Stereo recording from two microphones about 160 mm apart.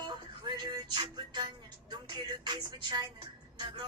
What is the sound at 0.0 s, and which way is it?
Music, 25° right (ahead or behind).